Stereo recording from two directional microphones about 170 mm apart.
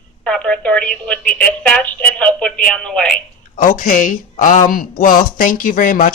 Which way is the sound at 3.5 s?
50° left (ahead or behind).